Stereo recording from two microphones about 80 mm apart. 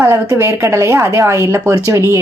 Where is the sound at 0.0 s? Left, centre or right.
Right.